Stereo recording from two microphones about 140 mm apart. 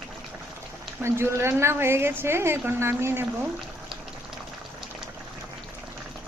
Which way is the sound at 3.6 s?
Centre (ahead or behind).